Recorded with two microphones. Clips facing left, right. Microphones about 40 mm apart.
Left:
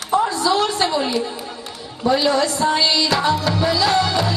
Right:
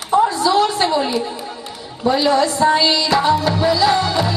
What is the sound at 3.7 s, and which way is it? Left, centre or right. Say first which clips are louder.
Music: right 2 dB; centre.